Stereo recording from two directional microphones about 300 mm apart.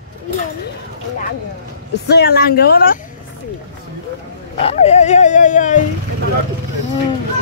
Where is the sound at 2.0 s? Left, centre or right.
Left.